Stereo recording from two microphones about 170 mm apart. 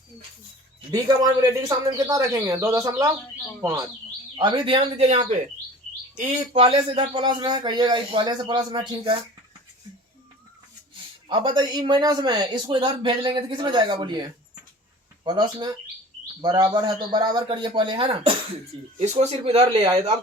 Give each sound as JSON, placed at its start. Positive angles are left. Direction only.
{"t": 0.9, "sound": "speech", "side_deg": -25}
{"t": 11.3, "sound": "speech", "side_deg": -30}
{"t": 18.9, "sound": "speech", "side_deg": -45}